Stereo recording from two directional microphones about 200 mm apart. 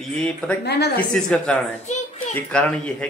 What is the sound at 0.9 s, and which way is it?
Speech, 5° left (ahead or behind).